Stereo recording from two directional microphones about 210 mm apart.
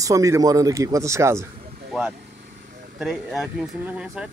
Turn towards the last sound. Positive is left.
turn(degrees=-5)  # may be behind; listen again after turning